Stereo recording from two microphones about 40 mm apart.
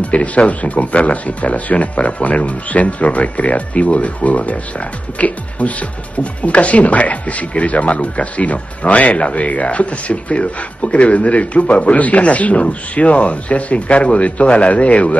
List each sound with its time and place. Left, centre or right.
0.0 s speech: left